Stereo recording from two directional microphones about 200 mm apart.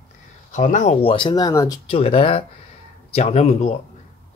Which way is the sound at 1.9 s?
30° left (ahead or behind).